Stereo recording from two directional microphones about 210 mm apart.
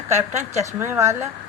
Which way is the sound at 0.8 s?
15° right (ahead or behind).